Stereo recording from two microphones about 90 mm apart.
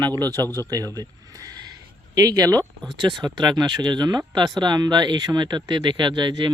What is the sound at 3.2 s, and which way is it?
Speech, 55° right (ahead or behind).